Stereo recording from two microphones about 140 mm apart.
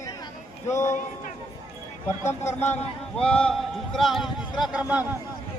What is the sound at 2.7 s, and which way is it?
A man's voice, 10° left (ahead or behind).